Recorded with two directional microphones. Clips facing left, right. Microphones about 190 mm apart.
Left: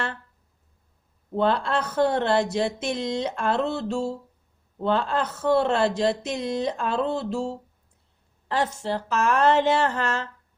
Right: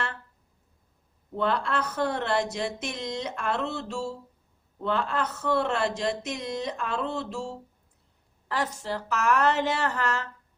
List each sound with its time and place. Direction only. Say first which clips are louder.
1.4 s speech: left 4 dB; 30° left (ahead or behind)